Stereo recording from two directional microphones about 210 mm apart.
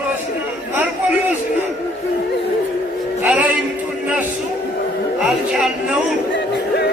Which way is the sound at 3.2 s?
5° right (ahead or behind).